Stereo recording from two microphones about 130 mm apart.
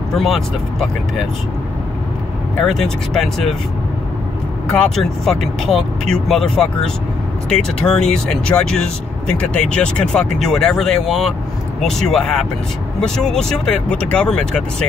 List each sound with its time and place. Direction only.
0.1 s speech: centre (ahead or behind)
2.6 s speech: 5° left (ahead or behind)
4.6 s speech: 5° left (ahead or behind)